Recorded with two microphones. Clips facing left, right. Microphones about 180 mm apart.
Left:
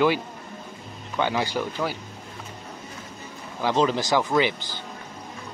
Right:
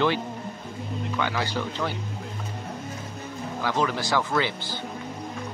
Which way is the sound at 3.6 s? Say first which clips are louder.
Left 4 dB; 20° left (ahead or behind).